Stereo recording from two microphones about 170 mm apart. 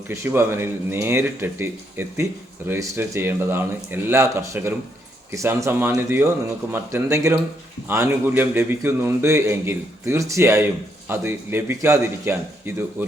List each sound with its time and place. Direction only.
0.1 s a man's voice: 15° right (ahead or behind)